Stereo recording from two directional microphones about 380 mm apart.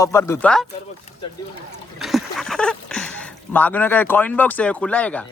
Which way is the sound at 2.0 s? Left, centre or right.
Centre.